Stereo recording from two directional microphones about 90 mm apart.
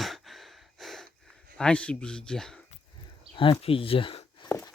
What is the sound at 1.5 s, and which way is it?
Speech, 10° left (ahead or behind).